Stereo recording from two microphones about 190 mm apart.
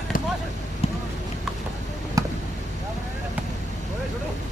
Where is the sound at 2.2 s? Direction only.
15° right (ahead or behind).